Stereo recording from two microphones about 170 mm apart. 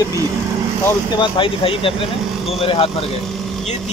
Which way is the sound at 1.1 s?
30° left (ahead or behind).